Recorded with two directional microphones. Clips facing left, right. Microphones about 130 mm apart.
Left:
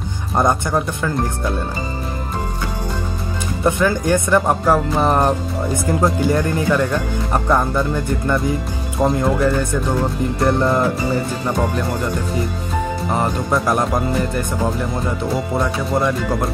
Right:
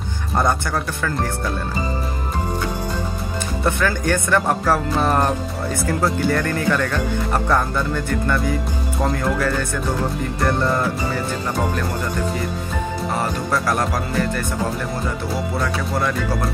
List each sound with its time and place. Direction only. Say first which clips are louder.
0.4 s speech: left 3 dB; 20° left (ahead or behind)
3.6 s speech: left 4 dB; 15° left (ahead or behind)
13.2 s speech: left 4 dB; 20° left (ahead or behind)